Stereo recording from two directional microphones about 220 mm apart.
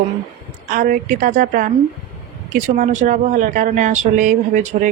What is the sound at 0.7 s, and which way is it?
Speech, 40° right (ahead or behind).